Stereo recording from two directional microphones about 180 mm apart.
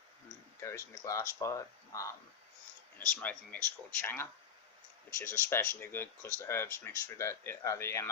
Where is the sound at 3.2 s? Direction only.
10° left (ahead or behind).